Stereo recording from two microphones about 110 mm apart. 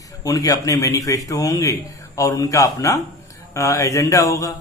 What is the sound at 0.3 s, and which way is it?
A man's voice, 30° left (ahead or behind).